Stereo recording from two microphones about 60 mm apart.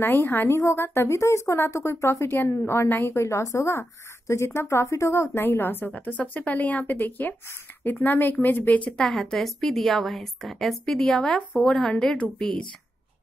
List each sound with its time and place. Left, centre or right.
0.0 s speech: left
0.6 s a woman's voice: left
1.1 s a woman's voice: left
5.9 s speech: left
8.9 s a woman's voice: centre